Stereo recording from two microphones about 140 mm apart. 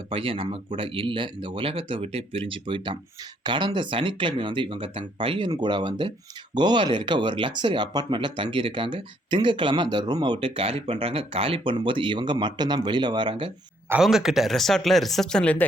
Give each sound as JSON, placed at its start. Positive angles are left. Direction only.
{"t": 0.1, "sound": "speech", "side_deg": -40}
{"t": 14.0, "sound": "speech", "side_deg": -5}